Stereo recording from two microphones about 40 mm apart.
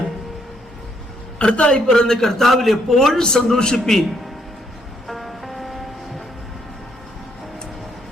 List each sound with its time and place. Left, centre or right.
1.4 s a man's voice: left; by 3.2 s centre
3.2 s a man's voice: centre
5.0 s music: centre